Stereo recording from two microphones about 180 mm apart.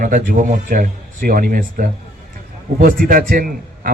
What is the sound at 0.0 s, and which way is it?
Speech, 45° right (ahead or behind).